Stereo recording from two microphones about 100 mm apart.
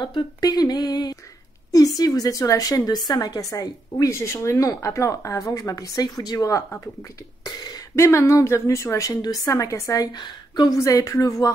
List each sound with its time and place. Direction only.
0.0 s a woman's voice: 45° left (ahead or behind)
7.4 s a sound: 40° left (ahead or behind)
7.9 s a woman's voice: 30° left (ahead or behind)
10.1 s a woman's voice: 45° left (ahead or behind)